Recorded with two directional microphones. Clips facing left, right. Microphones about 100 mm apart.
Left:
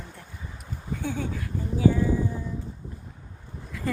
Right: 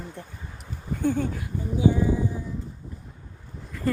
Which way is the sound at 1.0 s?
15° right (ahead or behind).